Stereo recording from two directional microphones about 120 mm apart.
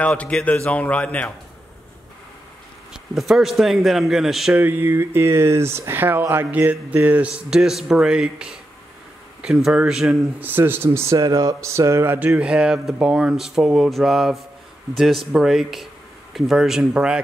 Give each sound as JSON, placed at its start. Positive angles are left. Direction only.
{"t": 0.0, "sound": "a man's voice", "side_deg": 10}
{"t": 2.9, "sound": "speech", "side_deg": -5}
{"t": 4.6, "sound": "speech", "side_deg": -15}
{"t": 10.4, "sound": "speech", "side_deg": -15}